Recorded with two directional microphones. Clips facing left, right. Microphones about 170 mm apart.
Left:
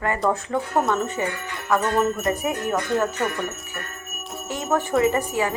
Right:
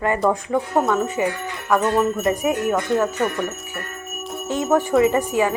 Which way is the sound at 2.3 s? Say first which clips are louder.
Right 4 dB; 15° right (ahead or behind).